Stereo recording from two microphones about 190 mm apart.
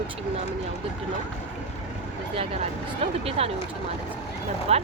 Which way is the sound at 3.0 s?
30° right (ahead or behind).